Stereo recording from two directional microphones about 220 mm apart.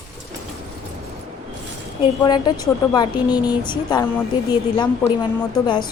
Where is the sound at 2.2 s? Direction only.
20° left (ahead or behind).